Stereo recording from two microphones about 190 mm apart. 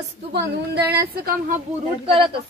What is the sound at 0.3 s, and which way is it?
A woman's voice, 55° right (ahead or behind).